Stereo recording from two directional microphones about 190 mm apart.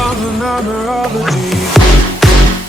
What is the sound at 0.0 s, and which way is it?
Music, centre (ahead or behind).